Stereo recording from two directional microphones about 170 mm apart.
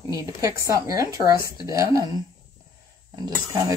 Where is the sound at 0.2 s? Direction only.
20° right (ahead or behind).